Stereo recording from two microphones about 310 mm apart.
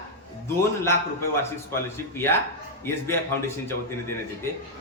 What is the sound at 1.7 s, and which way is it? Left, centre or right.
Speech, centre.